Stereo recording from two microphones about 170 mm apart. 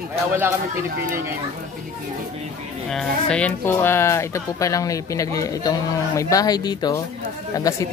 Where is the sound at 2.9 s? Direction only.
5° left (ahead or behind).